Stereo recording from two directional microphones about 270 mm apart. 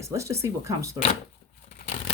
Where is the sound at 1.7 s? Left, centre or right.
Left.